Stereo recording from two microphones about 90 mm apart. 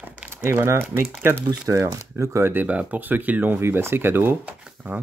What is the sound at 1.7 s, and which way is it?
Speech, 35° right (ahead or behind).